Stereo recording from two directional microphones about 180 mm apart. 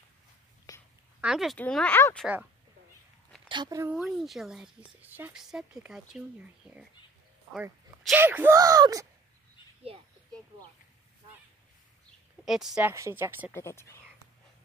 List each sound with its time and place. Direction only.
0.7 s a sound: 20° left (ahead or behind)
1.2 s speech: centre (ahead or behind)
3.4 s speech: 25° right (ahead or behind)
4.0 s speech: centre (ahead or behind); by 9.0 s 20° right (ahead or behind)
9.9 s speech: 30° right (ahead or behind)
12.4 s speech: centre (ahead or behind)
13.5 s speech: 15° left (ahead or behind)